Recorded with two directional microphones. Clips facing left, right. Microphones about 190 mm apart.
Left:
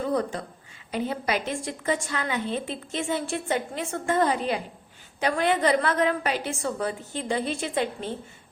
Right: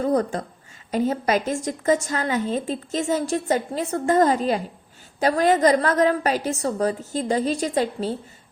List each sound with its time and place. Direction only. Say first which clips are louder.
0.0 s a woman's voice: right 5 dB; 45° right (ahead or behind)